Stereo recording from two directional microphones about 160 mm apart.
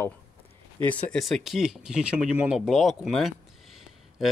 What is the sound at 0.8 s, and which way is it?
Speech, 10° left (ahead or behind).